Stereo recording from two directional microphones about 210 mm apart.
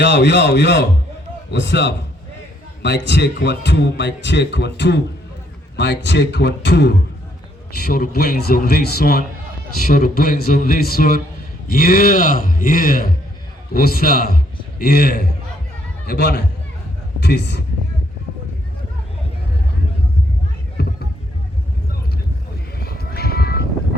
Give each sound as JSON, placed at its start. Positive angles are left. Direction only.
{"t": 0.0, "sound": "a man's voice", "side_deg": 55}
{"t": 20.8, "sound": "a sound", "side_deg": 50}
{"t": 22.8, "sound": "music", "side_deg": 50}